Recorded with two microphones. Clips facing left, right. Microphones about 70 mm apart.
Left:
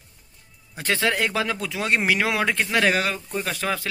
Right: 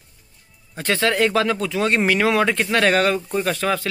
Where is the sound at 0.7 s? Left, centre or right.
Centre.